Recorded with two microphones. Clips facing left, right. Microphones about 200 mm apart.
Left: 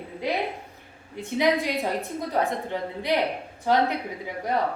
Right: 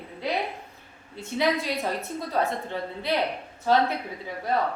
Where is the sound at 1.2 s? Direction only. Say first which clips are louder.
Left 2 dB; 15° left (ahead or behind).